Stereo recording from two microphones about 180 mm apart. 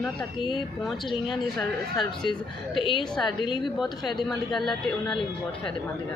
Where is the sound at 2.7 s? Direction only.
30° left (ahead or behind).